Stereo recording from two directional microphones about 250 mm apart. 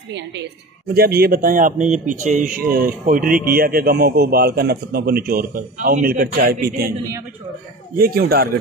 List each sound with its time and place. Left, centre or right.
0.1 s a woman's voice: right
8.0 s a man's voice: right